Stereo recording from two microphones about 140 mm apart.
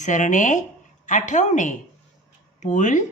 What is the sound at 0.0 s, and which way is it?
Speech, 60° left (ahead or behind).